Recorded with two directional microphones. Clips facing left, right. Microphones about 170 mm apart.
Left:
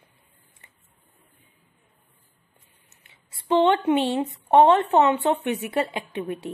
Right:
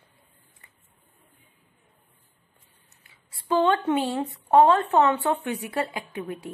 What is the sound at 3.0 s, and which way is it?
A woman's voice, 25° left (ahead or behind).